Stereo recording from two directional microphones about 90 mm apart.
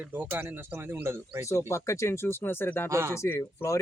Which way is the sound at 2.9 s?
30° right (ahead or behind).